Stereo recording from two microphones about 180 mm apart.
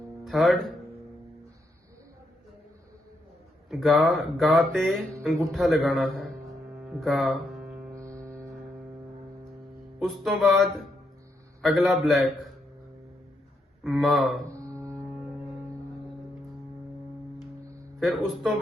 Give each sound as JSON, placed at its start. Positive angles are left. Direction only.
{"t": 0.3, "sound": "speech", "side_deg": 0}
{"t": 3.7, "sound": "speech", "side_deg": 0}
{"t": 6.8, "sound": "music", "side_deg": 0}
{"t": 7.9, "sound": "hum", "side_deg": -15}
{"t": 10.0, "sound": "speech", "side_deg": 0}
{"t": 13.8, "sound": "speech", "side_deg": 0}
{"t": 14.5, "sound": "music", "side_deg": -15}
{"t": 18.0, "sound": "speech", "side_deg": 0}